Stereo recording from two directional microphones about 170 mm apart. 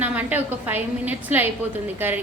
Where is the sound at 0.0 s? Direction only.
10° right (ahead or behind).